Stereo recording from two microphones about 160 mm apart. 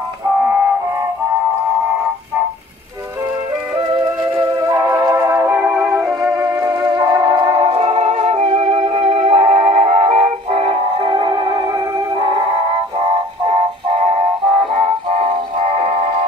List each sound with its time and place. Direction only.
3.8 s music: 30° right (ahead or behind)
4.6 s music: 15° right (ahead or behind); by 16.1 s 40° right (ahead or behind)